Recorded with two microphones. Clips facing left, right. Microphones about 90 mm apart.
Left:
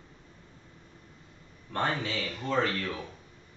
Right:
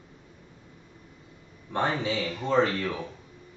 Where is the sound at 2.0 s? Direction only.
20° right (ahead or behind).